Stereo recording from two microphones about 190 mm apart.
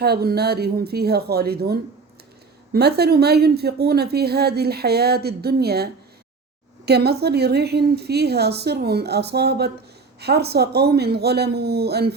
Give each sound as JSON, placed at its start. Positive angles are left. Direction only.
{"t": 0.0, "sound": "a woman's voice", "side_deg": -55}